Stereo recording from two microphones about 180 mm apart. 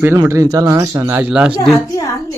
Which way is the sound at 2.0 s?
15° left (ahead or behind).